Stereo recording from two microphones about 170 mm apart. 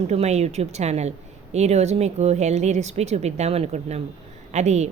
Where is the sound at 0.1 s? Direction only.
40° right (ahead or behind).